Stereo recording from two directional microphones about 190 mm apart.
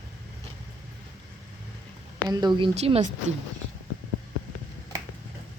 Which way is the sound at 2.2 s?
20° right (ahead or behind).